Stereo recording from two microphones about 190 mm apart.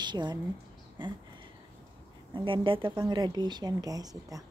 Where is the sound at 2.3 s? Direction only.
25° right (ahead or behind).